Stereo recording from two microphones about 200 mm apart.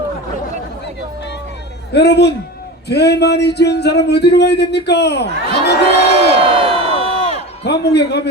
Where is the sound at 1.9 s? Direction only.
55° left (ahead or behind).